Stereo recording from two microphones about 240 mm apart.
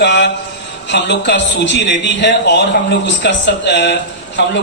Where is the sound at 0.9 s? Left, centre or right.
Left.